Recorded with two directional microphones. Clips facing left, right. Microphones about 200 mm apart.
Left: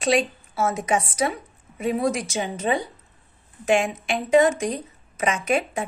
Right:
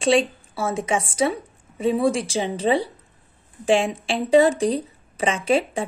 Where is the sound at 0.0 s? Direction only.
30° right (ahead or behind).